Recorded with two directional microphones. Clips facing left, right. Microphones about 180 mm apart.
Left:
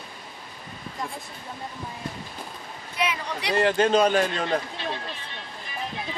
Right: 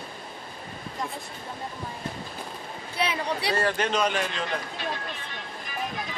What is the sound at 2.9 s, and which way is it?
Speech, 30° right (ahead or behind).